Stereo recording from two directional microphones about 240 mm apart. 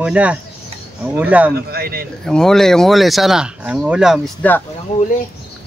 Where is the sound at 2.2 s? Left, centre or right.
Centre.